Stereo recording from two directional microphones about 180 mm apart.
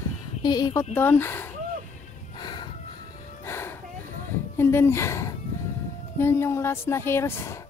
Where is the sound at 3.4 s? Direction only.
15° left (ahead or behind).